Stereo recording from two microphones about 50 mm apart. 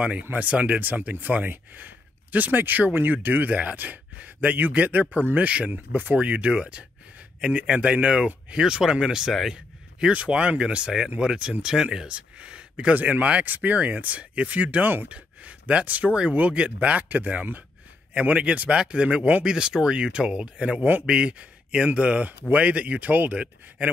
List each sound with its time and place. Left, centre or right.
0.3 s speech: right
12.9 s speech: right